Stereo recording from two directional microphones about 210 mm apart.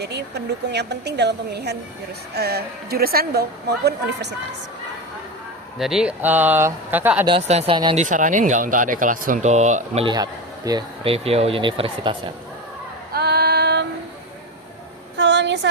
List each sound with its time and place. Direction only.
0.0 s a woman's voice: 50° right (ahead or behind)
5.8 s speech: 5° right (ahead or behind)
7.3 s speech: 30° right (ahead or behind)
13.1 s female singing: 50° right (ahead or behind)
15.2 s a sound: 55° right (ahead or behind)